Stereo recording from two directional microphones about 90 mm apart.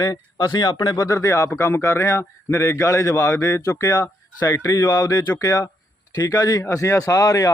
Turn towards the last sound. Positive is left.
turn(degrees=40)  # may be behind; listen again after turning